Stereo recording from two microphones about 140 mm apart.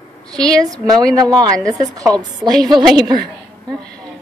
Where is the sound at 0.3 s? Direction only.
5° left (ahead or behind).